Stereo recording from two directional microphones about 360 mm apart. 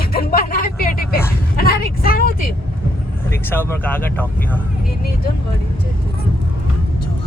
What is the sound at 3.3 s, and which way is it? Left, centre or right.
Speech, centre.